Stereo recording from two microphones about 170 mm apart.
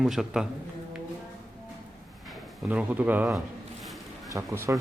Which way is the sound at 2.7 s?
10° right (ahead or behind).